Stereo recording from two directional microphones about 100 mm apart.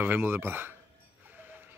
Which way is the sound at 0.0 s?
15° right (ahead or behind).